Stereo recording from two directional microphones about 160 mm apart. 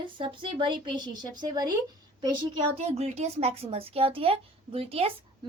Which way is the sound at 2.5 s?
40° right (ahead or behind).